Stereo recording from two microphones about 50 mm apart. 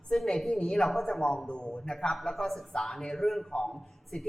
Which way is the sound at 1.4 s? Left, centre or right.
Centre.